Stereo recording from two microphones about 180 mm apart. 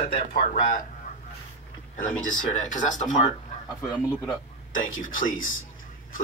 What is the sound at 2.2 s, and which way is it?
Music, 45° left (ahead or behind).